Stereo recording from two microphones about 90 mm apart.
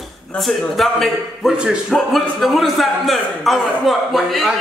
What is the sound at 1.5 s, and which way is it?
Speech, 10° right (ahead or behind).